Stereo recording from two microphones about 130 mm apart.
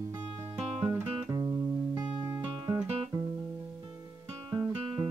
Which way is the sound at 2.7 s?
30° right (ahead or behind).